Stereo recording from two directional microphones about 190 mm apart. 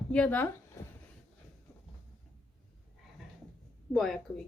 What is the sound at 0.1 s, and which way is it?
Speech, 5° left (ahead or behind).